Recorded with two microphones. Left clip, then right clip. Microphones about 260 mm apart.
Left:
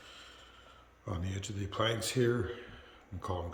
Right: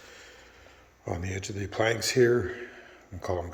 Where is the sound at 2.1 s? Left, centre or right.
Left.